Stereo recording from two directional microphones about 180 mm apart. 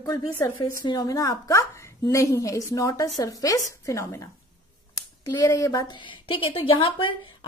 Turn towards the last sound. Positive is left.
turn(degrees=30)  # may be behind; listen again after turning